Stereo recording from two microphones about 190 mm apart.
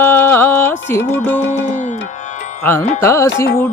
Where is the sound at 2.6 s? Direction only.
10° left (ahead or behind).